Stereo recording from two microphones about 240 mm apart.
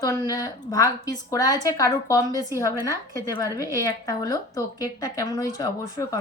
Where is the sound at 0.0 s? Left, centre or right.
Centre.